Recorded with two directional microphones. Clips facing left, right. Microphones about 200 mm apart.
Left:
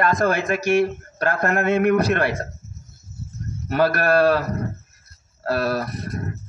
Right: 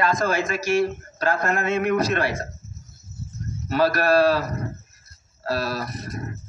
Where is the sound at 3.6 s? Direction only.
55° left (ahead or behind).